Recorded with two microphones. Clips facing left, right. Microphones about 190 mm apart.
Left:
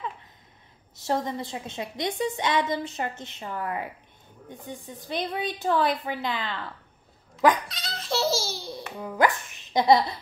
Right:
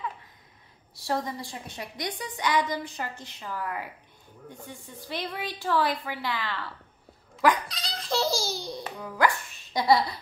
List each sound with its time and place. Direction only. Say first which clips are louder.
0.9 s a woman's voice: left 3 dB; 20° left (ahead or behind)
7.6 s baby laughter: even; centre (ahead or behind)
8.9 s speech: left 2 dB; 20° left (ahead or behind)